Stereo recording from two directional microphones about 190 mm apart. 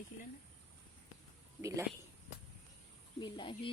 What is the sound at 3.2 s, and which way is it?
Speech, 25° left (ahead or behind).